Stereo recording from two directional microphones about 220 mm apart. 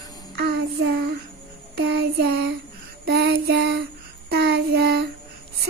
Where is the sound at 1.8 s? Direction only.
50° right (ahead or behind).